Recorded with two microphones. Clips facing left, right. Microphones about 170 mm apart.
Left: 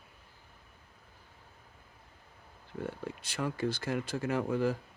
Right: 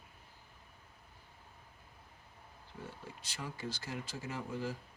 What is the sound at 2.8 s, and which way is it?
Speech, 60° left (ahead or behind).